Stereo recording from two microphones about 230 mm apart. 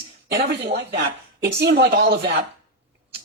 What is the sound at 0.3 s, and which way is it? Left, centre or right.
Speech, right.